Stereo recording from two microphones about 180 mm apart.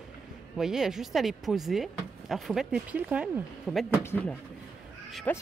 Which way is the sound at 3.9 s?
15° left (ahead or behind).